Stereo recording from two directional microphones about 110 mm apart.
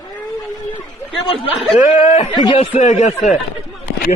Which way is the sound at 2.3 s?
40° left (ahead or behind).